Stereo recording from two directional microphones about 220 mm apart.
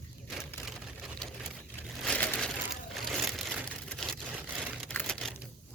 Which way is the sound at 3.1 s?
Centre (ahead or behind).